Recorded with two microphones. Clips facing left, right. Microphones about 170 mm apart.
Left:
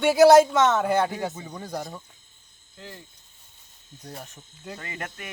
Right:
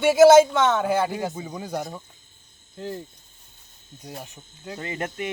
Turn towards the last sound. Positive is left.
turn(degrees=-25)  # may be behind; listen again after turning